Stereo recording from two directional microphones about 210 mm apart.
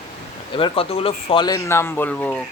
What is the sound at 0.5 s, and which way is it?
Speech, 25° left (ahead or behind).